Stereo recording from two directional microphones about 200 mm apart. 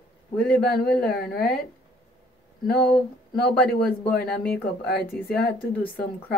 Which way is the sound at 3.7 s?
5° left (ahead or behind).